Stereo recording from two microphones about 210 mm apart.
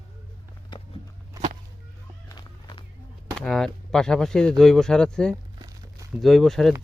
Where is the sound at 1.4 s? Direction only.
15° right (ahead or behind).